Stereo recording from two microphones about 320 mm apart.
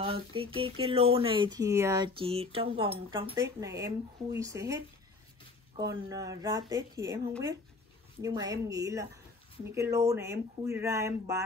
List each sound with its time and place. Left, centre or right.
0.0 s speech: centre
6.0 s speech: centre